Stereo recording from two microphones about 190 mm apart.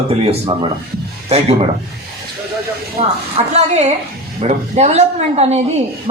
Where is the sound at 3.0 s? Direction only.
30° right (ahead or behind).